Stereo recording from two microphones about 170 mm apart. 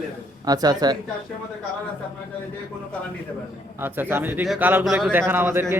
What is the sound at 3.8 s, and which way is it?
Speech, 15° right (ahead or behind).